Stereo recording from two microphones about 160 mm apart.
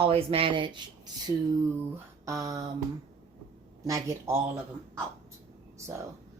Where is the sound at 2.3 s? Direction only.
20° right (ahead or behind).